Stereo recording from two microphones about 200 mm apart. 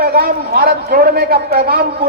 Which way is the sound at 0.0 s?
45° right (ahead or behind).